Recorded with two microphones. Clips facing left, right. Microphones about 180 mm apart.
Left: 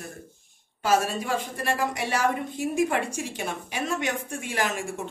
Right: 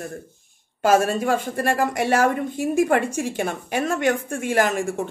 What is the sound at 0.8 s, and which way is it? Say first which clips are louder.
A woman's voice: right 6 dB; 50° right (ahead or behind).